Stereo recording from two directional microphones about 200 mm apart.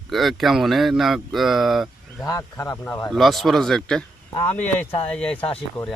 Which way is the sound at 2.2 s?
15° left (ahead or behind).